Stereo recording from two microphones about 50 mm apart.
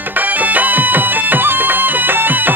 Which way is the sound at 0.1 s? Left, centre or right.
Right.